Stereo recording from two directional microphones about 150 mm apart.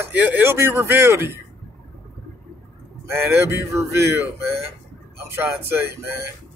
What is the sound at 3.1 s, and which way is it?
Speech, 15° right (ahead or behind).